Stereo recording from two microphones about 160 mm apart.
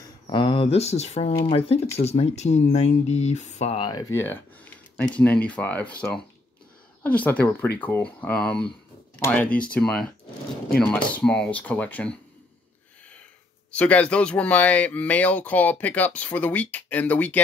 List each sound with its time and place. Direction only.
0.3 s speech: 30° left (ahead or behind)
3.8 s speech: 25° left (ahead or behind); by 12.2 s 10° left (ahead or behind)
13.7 s speech: 10° left (ahead or behind)